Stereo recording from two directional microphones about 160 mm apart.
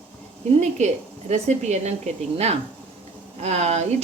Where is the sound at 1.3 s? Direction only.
45° right (ahead or behind).